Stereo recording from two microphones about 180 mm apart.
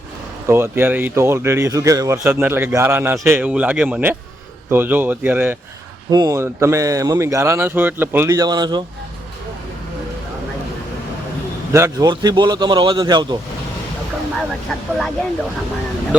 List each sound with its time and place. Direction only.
0.4 s speech: 15° right (ahead or behind)
6.1 s speech: 20° right (ahead or behind)
11.7 s a man's voice: 15° right (ahead or behind)
14.7 s speech: centre (ahead or behind)